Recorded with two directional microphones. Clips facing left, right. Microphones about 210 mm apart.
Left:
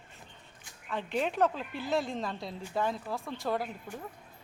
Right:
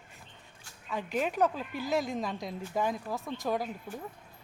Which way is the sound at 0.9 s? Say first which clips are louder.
Even; 10° right (ahead or behind).